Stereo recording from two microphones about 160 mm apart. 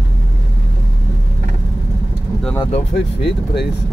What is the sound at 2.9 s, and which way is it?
Speech, 90° left.